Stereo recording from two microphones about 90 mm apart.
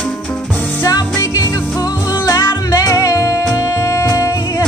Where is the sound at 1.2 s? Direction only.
40° left (ahead or behind).